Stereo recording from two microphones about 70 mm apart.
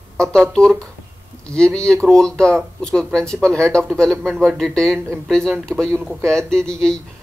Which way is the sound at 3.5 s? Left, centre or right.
Right.